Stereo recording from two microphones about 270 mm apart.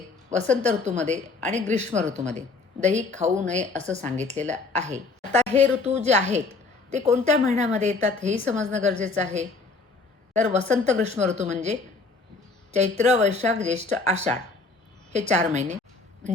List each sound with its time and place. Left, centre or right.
0.3 s speech: right
15.3 s speech: right